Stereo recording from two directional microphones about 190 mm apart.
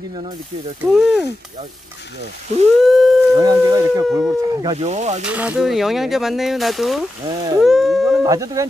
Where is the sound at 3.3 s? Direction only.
20° right (ahead or behind).